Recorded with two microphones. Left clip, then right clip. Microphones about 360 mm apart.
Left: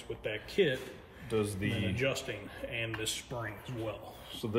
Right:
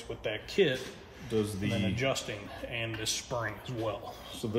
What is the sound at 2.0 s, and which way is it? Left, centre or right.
Speech, centre.